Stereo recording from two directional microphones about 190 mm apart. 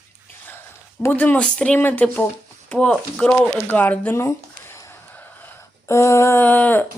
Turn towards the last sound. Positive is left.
turn(degrees=10)  # may be behind; listen again after turning